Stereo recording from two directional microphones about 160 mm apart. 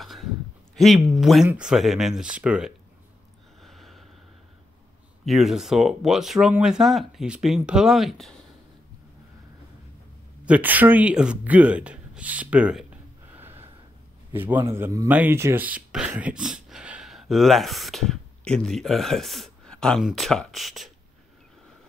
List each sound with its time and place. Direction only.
0.0 s a sound: centre (ahead or behind)
0.7 s speech: centre (ahead or behind)
3.6 s a sound: centre (ahead or behind)
5.2 s speech: centre (ahead or behind)
10.4 s speech: 10° right (ahead or behind)
13.3 s gasp: 15° right (ahead or behind)
14.3 s speech: 15° right (ahead or behind)